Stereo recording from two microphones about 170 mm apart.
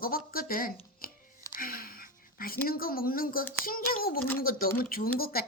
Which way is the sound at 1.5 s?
60° left (ahead or behind).